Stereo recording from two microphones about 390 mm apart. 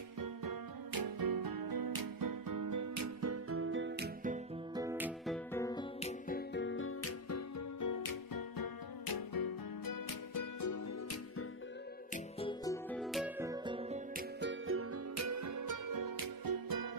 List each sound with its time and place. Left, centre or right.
0.2 s music: right
4.7 s music: centre; by 11.4 s left
12.4 s music: centre; by 16.9 s right